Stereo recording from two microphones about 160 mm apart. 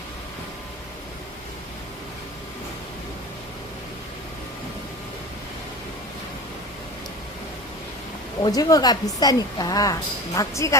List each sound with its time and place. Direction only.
8.4 s a woman's voice: 25° left (ahead or behind)